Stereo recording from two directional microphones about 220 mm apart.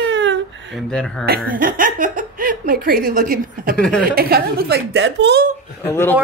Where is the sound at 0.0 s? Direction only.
55° right (ahead or behind).